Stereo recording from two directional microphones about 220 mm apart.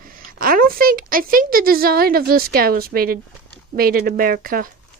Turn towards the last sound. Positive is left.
turn(degrees=-40)  # may be behind; listen again after turning